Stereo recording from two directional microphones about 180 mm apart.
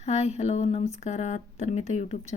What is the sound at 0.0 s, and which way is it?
Speech, 40° left (ahead or behind).